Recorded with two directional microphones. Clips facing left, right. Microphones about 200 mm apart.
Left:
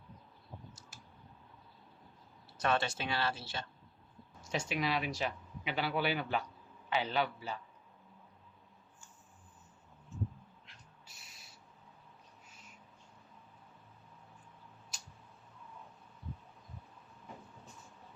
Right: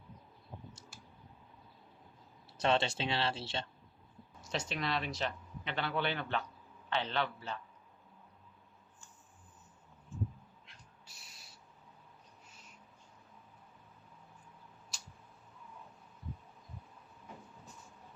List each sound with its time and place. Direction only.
2.6 s speech: 25° right (ahead or behind)
4.4 s a man's voice: 10° left (ahead or behind)